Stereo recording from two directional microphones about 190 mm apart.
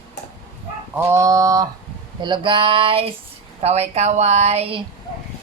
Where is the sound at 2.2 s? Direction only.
25° right (ahead or behind).